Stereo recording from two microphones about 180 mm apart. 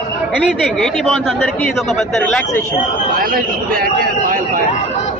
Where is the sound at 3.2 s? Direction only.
55° right (ahead or behind).